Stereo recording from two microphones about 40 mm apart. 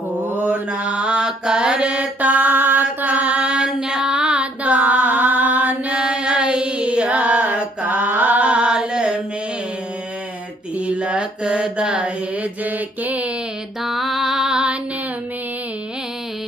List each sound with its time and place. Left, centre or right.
0.1 s mantra: right
1.2 s mantra: centre
1.8 s mantra: right
2.1 s mantra: right
3.4 s mantra: right
10.9 s mantra: right
12.6 s mantra: right
13.8 s music: centre
14.4 s music: right